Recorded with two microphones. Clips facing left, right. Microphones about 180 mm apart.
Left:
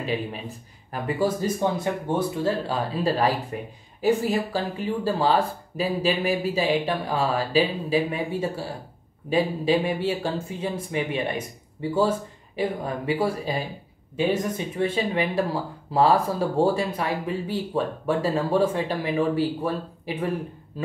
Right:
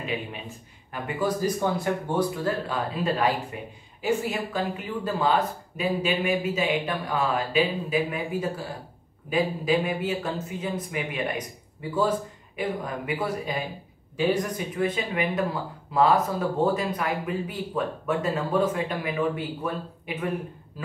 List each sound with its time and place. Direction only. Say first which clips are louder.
0.0 s speech: left 4 dB; 35° left (ahead or behind)